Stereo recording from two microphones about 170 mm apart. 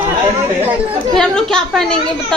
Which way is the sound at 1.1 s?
5° left (ahead or behind).